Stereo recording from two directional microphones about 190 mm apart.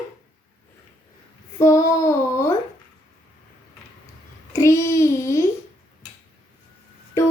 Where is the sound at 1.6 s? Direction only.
15° left (ahead or behind).